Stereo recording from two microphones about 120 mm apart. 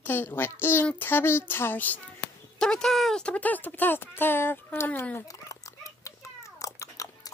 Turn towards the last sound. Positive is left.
turn(degrees=25)  # may be behind; listen again after turning